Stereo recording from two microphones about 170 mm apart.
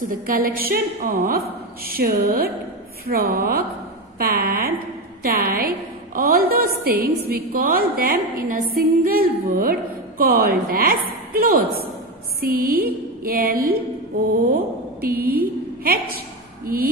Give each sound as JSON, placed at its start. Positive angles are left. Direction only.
{"t": 0.1, "sound": "a woman's voice", "side_deg": -55}
{"t": 12.4, "sound": "a sound", "side_deg": -60}
{"t": 14.4, "sound": "a woman's voice", "side_deg": -55}